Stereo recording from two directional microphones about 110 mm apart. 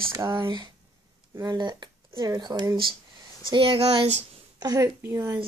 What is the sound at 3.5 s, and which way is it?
Speech, 55° right (ahead or behind).